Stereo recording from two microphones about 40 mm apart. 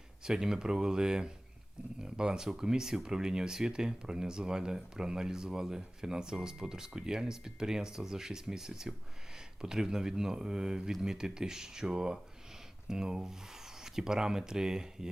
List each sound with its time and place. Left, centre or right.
0.3 s speech: centre